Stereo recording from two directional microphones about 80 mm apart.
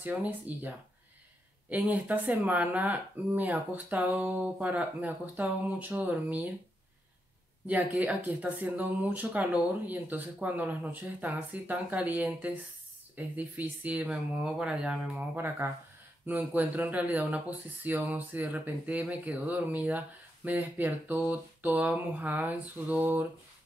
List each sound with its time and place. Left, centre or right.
0.0 s speech: centre
7.6 s speech: centre
15.3 s speech: right